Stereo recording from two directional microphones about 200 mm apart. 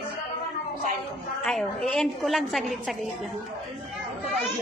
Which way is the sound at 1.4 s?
Centre (ahead or behind).